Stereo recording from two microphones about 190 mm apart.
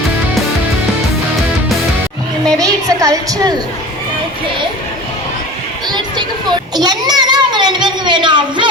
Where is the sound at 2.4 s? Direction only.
20° right (ahead or behind).